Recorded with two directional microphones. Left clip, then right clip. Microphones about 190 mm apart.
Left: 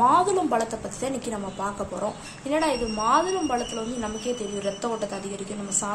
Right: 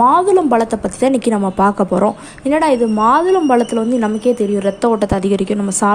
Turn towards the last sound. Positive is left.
turn(degrees=-50)  # may be behind; listen again after turning